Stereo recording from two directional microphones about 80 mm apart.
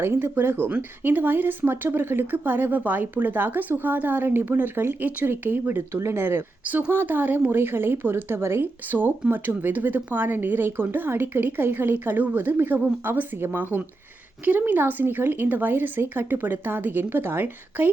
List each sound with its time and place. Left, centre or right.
0.0 s speech: right
5.9 s speech: right